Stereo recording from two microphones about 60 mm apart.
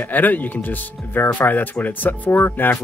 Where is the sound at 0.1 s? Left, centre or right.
Left.